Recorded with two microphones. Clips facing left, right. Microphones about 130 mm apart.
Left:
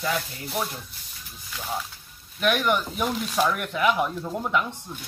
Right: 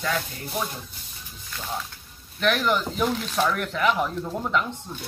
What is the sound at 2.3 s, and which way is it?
Speech, 5° left (ahead or behind).